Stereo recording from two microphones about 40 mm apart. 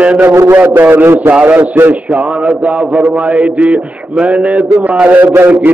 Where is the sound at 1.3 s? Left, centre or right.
Right.